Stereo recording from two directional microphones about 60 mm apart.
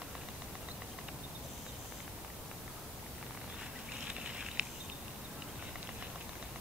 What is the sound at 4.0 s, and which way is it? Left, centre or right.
Patter, centre.